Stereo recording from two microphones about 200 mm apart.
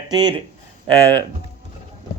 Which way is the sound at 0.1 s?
20° right (ahead or behind).